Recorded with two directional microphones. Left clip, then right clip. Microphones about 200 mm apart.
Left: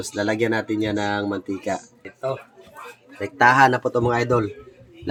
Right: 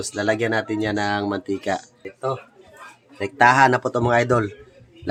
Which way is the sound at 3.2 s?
20° right (ahead or behind).